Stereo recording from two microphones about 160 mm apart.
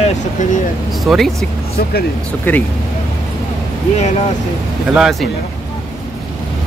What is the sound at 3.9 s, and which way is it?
Speech, 40° left (ahead or behind).